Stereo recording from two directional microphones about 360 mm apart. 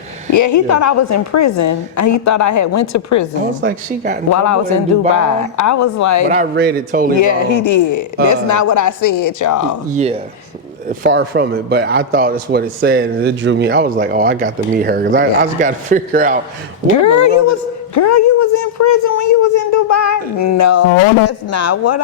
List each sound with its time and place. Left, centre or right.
0.3 s a woman's voice: left
3.6 s a man's voice: right
4.3 s a woman's voice: left
6.2 s a man's voice: right
7.2 s a woman's voice: left
9.9 s a man's voice: centre
16.8 s a woman's voice: left